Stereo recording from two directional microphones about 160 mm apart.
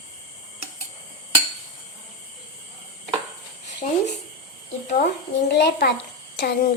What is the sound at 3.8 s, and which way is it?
Speech, 50° left (ahead or behind).